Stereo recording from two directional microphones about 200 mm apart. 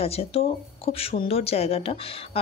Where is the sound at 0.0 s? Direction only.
30° left (ahead or behind).